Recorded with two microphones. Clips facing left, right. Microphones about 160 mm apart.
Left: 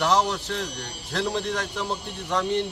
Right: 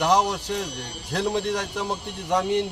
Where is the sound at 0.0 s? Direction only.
10° right (ahead or behind).